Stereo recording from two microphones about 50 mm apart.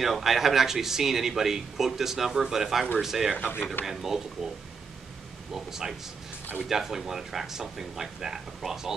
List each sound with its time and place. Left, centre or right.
0.0 s speech: centre
3.3 s speech: left
3.8 s speech: centre
5.5 s speech: centre